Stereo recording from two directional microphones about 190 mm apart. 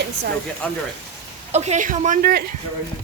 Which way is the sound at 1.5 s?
35° right (ahead or behind).